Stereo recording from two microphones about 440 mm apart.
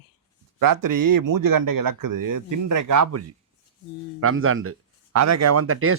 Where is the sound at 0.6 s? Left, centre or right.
Right.